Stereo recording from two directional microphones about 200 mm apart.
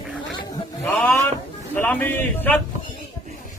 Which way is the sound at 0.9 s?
5° left (ahead or behind).